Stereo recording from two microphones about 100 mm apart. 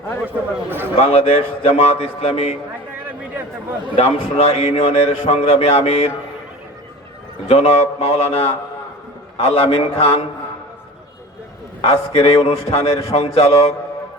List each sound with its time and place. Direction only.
0.7 s a man's voice: 20° right (ahead or behind)
0.9 s a man's voice: 90° left
3.9 s a man's voice: 90° left
7.4 s a man's voice: 90° left; by 10.2 s 75° left (ahead or behind)
11.8 s a man's voice: 65° left (ahead or behind); by 13.7 s 90° left